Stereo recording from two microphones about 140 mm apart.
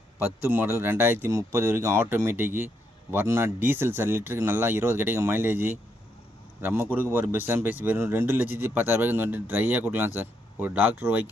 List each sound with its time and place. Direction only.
0.4 s speech: 15° right (ahead or behind)